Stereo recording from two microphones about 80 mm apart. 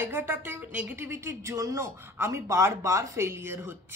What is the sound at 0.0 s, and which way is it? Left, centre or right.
Speech, right.